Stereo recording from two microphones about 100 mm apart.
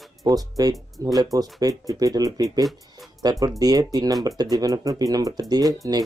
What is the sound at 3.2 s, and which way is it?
Speech, 40° right (ahead or behind).